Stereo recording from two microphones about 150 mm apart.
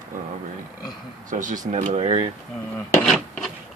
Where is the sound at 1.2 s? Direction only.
60° right (ahead or behind).